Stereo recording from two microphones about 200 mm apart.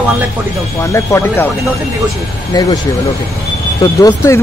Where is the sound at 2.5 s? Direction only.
20° left (ahead or behind).